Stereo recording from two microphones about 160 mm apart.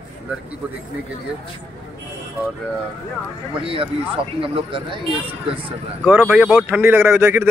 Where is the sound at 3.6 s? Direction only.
35° right (ahead or behind).